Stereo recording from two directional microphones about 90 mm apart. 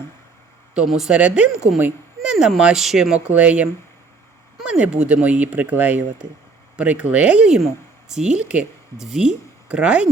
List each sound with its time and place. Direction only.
0.9 s speech: 5° right (ahead or behind)
1.8 s a sound: 10° right (ahead or behind)
2.6 s speech: 5° right (ahead or behind)